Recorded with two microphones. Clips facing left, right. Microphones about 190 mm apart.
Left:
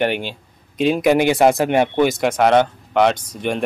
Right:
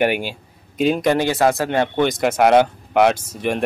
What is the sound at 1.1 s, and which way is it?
Speech, 15° left (ahead or behind).